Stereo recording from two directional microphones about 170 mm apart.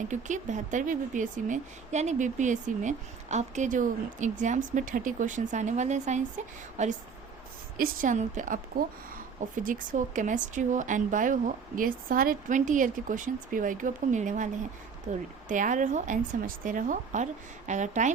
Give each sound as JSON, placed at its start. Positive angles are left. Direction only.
{"t": 0.1, "sound": "speech", "side_deg": -45}
{"t": 9.6, "sound": "speech", "side_deg": -50}